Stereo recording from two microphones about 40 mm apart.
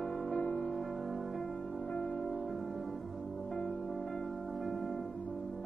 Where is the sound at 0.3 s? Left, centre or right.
Left.